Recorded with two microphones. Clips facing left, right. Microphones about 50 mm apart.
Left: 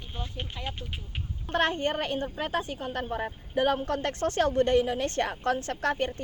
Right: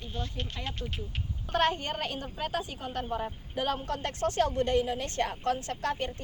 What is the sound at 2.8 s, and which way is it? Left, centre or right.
Speech, left.